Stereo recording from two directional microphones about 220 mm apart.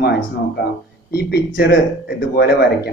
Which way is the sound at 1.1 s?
45° left (ahead or behind).